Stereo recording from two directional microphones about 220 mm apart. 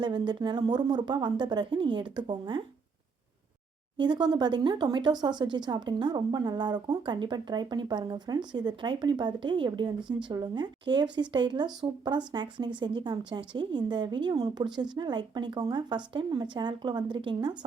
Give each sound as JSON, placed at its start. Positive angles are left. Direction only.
{"t": 0.0, "sound": "speech", "side_deg": -20}
{"t": 4.0, "sound": "speech", "side_deg": -20}